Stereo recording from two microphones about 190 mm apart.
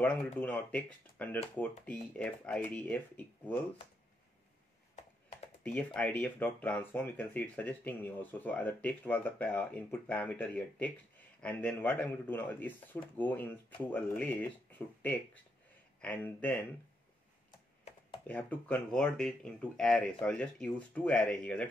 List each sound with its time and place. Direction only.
0.0 s speech: 5° left (ahead or behind)
5.9 s speech: 5° left (ahead or behind)
18.2 s speech: 10° left (ahead or behind)